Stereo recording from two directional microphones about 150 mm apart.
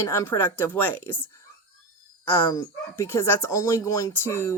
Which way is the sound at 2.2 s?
15° left (ahead or behind).